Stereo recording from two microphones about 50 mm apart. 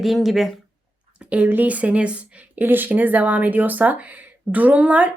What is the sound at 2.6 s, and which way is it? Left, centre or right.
A woman's voice, right.